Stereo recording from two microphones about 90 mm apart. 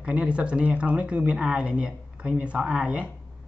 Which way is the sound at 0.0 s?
10° right (ahead or behind).